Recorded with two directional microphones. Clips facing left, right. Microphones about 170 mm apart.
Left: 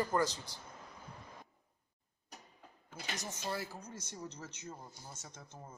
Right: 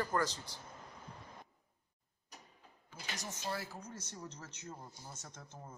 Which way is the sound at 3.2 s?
20° left (ahead or behind).